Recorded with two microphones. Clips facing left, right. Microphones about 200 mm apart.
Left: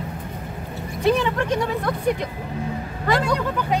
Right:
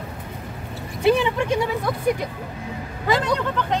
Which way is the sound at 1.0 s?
15° right (ahead or behind).